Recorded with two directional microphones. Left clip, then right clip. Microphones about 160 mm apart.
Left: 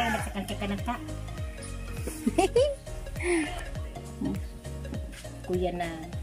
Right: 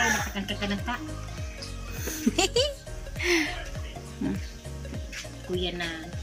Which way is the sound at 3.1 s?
20° left (ahead or behind).